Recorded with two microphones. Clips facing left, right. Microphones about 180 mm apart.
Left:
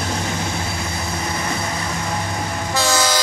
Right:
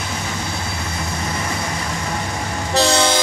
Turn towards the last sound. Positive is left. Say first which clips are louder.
# right 3 dB
turn(degrees=-30)  # may be behind; listen again after turning